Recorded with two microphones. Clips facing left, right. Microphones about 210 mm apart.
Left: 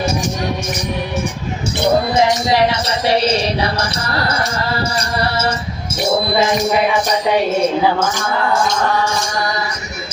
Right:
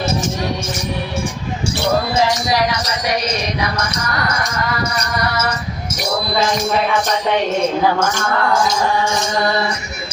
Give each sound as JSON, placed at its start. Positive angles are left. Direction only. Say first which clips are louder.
{"t": 1.6, "sound": "speech", "louder": "left 3 dB", "side_deg": 20}